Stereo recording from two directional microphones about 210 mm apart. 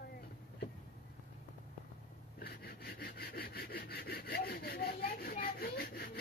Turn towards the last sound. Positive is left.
turn(degrees=45)  # may be behind; listen again after turning